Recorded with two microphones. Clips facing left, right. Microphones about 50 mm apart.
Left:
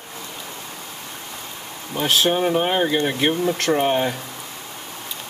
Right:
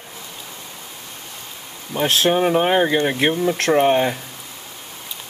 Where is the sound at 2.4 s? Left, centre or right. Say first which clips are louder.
Right 3 dB; right.